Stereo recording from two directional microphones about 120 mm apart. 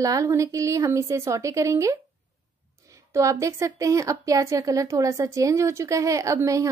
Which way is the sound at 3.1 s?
25° right (ahead or behind).